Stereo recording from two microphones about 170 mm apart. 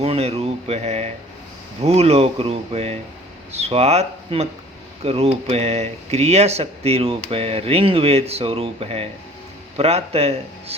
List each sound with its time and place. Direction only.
0.0 s speech: 35° right (ahead or behind)